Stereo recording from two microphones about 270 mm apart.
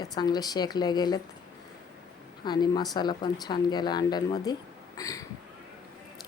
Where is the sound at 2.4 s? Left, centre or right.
Centre.